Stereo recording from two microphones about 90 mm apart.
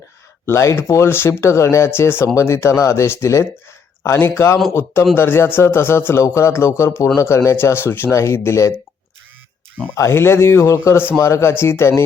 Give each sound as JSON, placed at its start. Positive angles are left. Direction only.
{"t": 0.4, "sound": "speech", "side_deg": 30}
{"t": 9.9, "sound": "speech", "side_deg": 30}